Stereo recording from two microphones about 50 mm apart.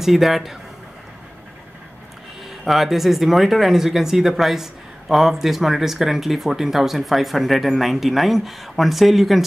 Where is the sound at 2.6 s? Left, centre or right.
Centre.